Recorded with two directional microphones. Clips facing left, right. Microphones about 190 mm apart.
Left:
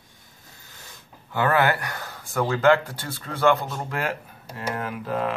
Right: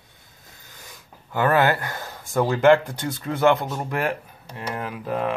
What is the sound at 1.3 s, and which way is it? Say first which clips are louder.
Speech: right 2 dB; 20° right (ahead or behind).